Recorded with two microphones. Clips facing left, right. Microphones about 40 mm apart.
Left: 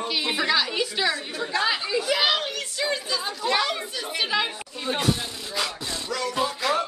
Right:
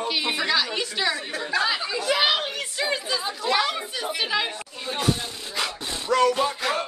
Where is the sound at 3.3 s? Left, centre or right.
Centre.